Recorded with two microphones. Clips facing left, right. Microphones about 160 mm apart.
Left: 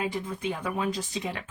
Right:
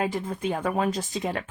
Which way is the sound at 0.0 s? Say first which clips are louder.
Right 3 dB; 50° right (ahead or behind).